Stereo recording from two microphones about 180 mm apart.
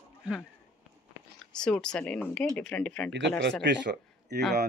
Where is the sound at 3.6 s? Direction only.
75° right (ahead or behind).